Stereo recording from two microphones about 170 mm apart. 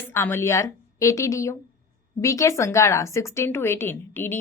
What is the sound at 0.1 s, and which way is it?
A woman's voice, 15° left (ahead or behind).